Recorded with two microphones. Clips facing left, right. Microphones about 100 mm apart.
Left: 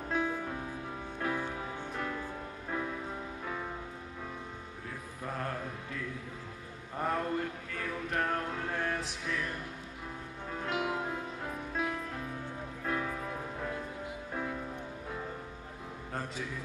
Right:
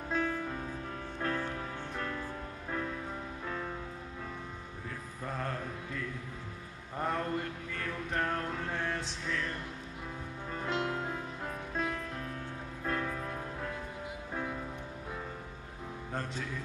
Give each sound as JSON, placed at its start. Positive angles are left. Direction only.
{"t": 0.1, "sound": "music", "side_deg": 10}
{"t": 5.2, "sound": "music", "side_deg": 5}
{"t": 16.1, "sound": "music", "side_deg": 5}